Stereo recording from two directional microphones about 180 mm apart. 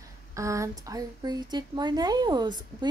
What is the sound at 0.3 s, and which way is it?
A woman's voice, 15° right (ahead or behind).